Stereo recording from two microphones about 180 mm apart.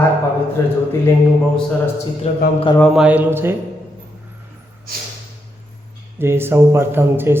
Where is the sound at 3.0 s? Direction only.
10° right (ahead or behind).